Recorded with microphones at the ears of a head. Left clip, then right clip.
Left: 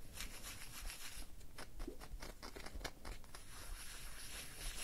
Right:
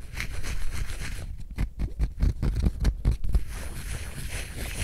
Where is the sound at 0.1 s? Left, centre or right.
Right.